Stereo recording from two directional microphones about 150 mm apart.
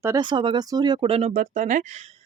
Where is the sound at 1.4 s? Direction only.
60° right (ahead or behind).